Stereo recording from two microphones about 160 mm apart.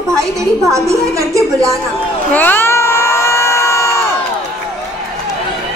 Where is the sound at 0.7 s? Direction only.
20° right (ahead or behind).